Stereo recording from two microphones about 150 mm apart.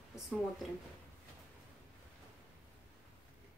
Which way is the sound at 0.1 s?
5° right (ahead or behind).